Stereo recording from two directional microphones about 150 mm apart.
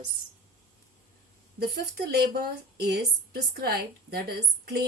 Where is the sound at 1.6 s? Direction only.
90° right.